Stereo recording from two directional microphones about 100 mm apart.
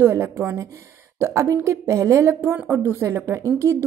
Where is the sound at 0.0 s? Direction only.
25° right (ahead or behind).